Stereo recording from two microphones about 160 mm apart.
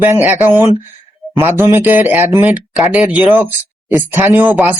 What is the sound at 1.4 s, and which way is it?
Speech, 15° right (ahead or behind).